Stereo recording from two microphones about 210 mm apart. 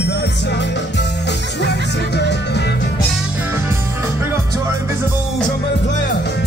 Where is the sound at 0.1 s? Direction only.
55° left (ahead or behind).